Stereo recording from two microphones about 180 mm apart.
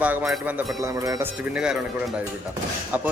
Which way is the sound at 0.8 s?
20° right (ahead or behind).